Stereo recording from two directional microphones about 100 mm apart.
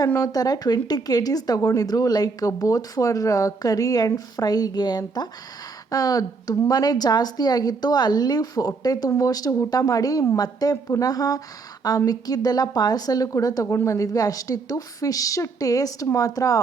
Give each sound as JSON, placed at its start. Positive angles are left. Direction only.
{"t": 0.2, "sound": "a woman's voice", "side_deg": 40}